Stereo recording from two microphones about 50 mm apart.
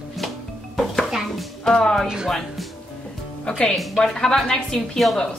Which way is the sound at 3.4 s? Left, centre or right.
Centre.